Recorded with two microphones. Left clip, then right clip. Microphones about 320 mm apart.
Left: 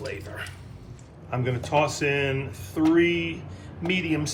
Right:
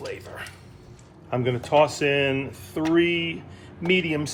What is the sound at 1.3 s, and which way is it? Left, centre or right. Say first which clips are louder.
Speech: right 4 dB; right.